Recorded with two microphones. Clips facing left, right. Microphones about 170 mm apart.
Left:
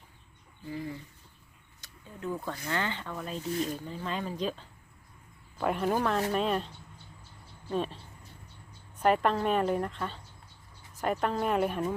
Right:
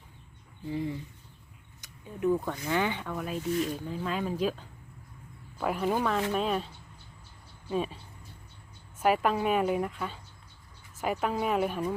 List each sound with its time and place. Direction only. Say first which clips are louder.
0.7 s a woman's voice: right 4 dB; 25° right (ahead or behind); by 6.7 s centre (ahead or behind)
7.7 s a woman's voice: right 1 dB; 5° right (ahead or behind)
9.0 s a woman's voice: even; 5° right (ahead or behind)